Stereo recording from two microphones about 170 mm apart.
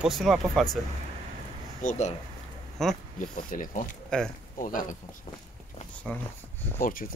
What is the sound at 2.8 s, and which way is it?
Speech, centre (ahead or behind).